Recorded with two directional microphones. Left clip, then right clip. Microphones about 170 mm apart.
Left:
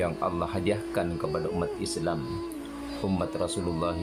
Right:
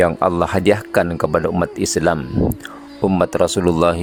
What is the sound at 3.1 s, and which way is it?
Speech, 70° right (ahead or behind).